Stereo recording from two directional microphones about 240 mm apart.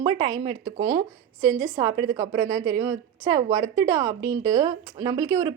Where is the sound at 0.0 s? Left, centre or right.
Centre.